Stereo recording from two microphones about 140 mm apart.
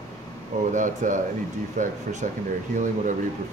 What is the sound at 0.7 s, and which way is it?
Speech, 60° right (ahead or behind).